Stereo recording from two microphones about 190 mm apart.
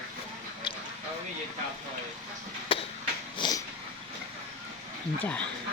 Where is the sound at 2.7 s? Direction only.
30° left (ahead or behind).